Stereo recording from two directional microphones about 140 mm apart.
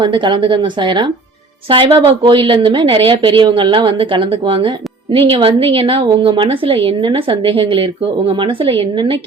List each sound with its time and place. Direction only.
0.0 s a woman's voice: 35° right (ahead or behind)